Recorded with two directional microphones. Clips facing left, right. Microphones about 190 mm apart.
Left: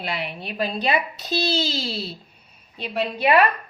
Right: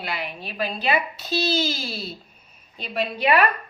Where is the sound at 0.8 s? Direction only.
35° left (ahead or behind).